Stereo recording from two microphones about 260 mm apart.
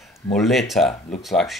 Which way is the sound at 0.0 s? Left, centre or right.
Centre.